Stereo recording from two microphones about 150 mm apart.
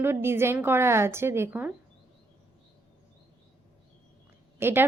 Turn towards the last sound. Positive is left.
turn(degrees=-15)  # may be behind; listen again after turning